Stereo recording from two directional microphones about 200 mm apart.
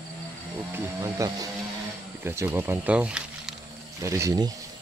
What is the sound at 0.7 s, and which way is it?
Speech, 15° right (ahead or behind).